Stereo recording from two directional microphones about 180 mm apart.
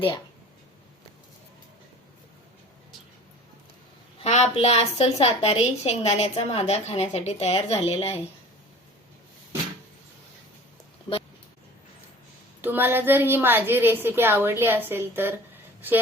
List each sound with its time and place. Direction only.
4.2 s a woman's voice: 40° left (ahead or behind)
12.6 s a woman's voice: 10° right (ahead or behind)